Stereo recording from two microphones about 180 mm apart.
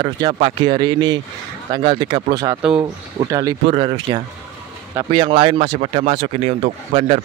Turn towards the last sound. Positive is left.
turn(degrees=-35)  # may be behind; listen again after turning